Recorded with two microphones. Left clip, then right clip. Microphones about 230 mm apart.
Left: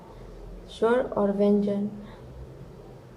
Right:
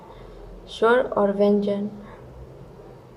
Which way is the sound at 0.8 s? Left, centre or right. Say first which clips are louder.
Right 5 dB; right.